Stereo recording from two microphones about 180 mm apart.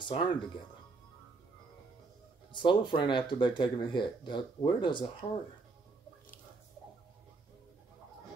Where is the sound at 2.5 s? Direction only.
25° left (ahead or behind).